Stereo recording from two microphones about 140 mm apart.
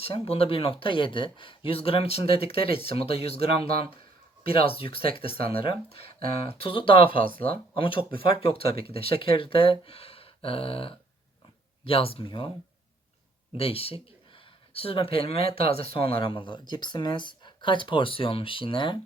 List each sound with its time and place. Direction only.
0.0 s speech: 45° left (ahead or behind)
7.1 s speech: 80° right
7.8 s speech: 40° left (ahead or behind)
13.6 s speech: 45° left (ahead or behind)